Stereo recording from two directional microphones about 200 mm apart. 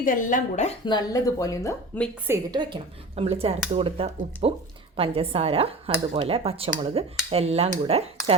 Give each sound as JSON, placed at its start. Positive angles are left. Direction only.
{"t": 0.0, "sound": "speech", "side_deg": 40}
{"t": 0.9, "sound": "a woman's voice", "side_deg": 20}
{"t": 2.2, "sound": "a woman's voice", "side_deg": -15}
{"t": 6.9, "sound": "dishes", "side_deg": -30}